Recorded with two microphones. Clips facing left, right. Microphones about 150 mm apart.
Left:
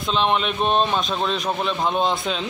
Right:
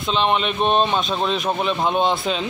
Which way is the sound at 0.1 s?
Centre (ahead or behind).